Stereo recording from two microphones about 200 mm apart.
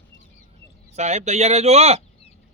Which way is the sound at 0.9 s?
35° right (ahead or behind).